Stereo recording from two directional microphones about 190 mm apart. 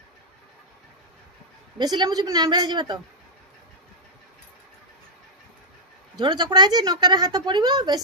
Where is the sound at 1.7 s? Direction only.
20° right (ahead or behind).